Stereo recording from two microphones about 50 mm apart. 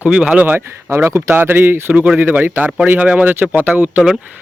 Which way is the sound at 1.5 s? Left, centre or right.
Right.